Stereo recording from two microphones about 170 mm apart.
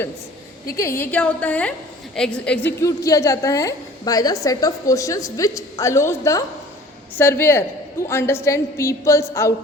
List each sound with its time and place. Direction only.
0.8 s a woman's voice: 15° left (ahead or behind)
2.8 s a woman's voice: 20° left (ahead or behind)